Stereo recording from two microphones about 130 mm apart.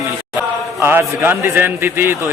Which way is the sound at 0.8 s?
20° right (ahead or behind).